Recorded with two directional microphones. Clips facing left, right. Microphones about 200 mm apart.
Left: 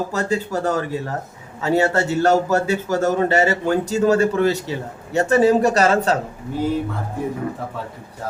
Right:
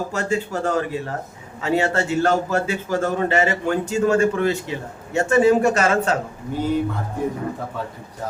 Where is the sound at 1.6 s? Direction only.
40° left (ahead or behind).